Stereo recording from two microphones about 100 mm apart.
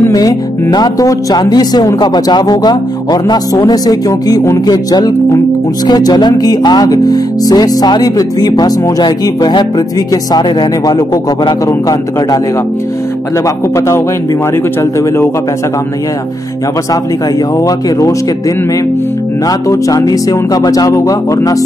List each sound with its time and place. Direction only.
0.1 s speech: 40° left (ahead or behind)
13.7 s a man's voice: 30° left (ahead or behind)
17.6 s speech: 35° left (ahead or behind)
19.4 s speech: 35° left (ahead or behind)